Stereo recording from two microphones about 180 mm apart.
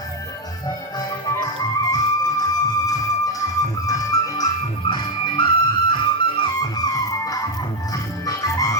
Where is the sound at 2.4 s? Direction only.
20° left (ahead or behind).